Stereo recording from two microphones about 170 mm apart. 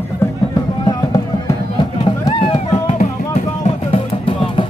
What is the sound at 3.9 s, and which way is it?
Music, 30° left (ahead or behind).